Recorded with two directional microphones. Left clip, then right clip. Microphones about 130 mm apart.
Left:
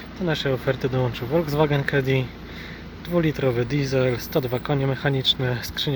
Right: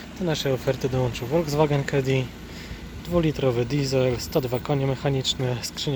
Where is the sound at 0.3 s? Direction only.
10° right (ahead or behind).